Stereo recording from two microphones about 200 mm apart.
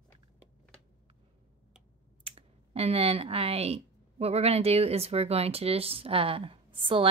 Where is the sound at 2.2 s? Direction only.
30° right (ahead or behind).